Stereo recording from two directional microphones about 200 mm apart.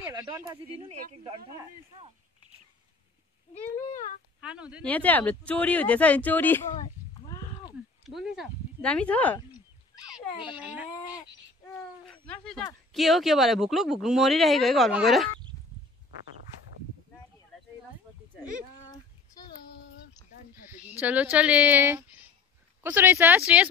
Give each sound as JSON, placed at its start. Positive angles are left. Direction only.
{"t": 0.0, "sound": "a sound", "side_deg": -10}
{"t": 1.2, "sound": "speech", "side_deg": -25}
{"t": 3.5, "sound": "speech", "side_deg": 35}
{"t": 4.4, "sound": "speech", "side_deg": -5}
{"t": 4.8, "sound": "speech", "side_deg": 10}
{"t": 8.0, "sound": "speech", "side_deg": 0}
{"t": 10.5, "sound": "speech", "side_deg": -5}
{"t": 10.9, "sound": "speech", "side_deg": 15}
{"t": 12.1, "sound": "speech", "side_deg": 5}
{"t": 21.0, "sound": "speech", "side_deg": -10}